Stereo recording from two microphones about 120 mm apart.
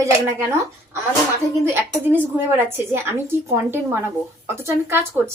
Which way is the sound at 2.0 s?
15° right (ahead or behind).